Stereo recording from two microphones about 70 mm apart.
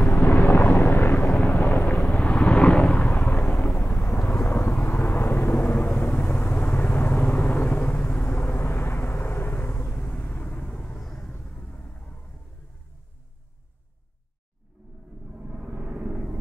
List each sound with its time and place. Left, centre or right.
0.1 s vehicle: left
1.3 s a sound: centre
2.3 s vehicle: centre
3.1 s vehicle: left
4.2 s vehicle: left; by 11.3 s centre
11.3 s vehicle: centre
15.3 s a sound: centre